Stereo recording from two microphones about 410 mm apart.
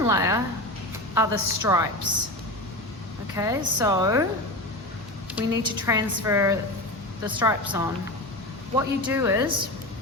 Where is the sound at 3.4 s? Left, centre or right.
Centre.